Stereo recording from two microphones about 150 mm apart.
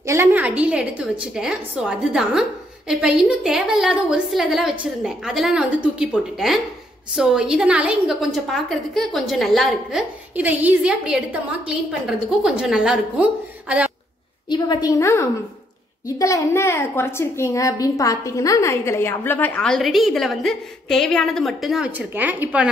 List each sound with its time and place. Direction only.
0.0 s a woman's voice: 20° right (ahead or behind)
14.5 s a woman's voice: 25° left (ahead or behind); by 22.7 s 10° right (ahead or behind)